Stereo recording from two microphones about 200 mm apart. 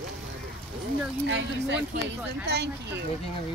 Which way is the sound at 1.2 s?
60° right (ahead or behind).